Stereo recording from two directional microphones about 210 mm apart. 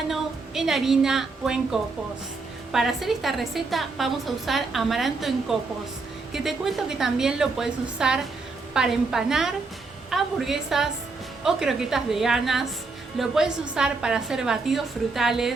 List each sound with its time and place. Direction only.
0.1 s a woman's voice: centre (ahead or behind)